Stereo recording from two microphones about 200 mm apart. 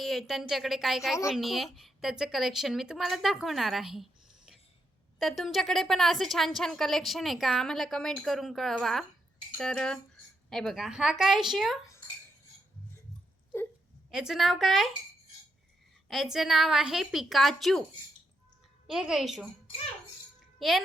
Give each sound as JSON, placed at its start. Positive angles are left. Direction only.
{"t": 0.0, "sound": "a woman's voice", "side_deg": 0}
{"t": 14.1, "sound": "a woman's voice", "side_deg": 0}
{"t": 16.0, "sound": "a woman's voice", "side_deg": 0}
{"t": 18.9, "sound": "a woman's voice", "side_deg": 0}
{"t": 20.6, "sound": "a child's voice", "side_deg": 0}